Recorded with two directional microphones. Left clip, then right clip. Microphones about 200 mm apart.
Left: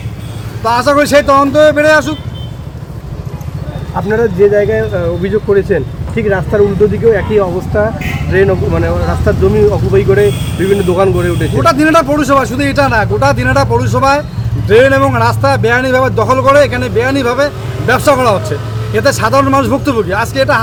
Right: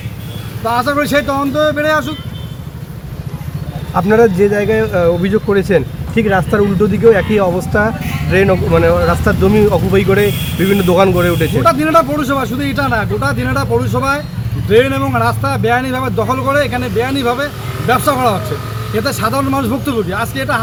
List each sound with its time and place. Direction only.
0.6 s speech: 20° left (ahead or behind)
3.9 s speech: 35° right (ahead or behind)
11.6 s speech: 20° left (ahead or behind)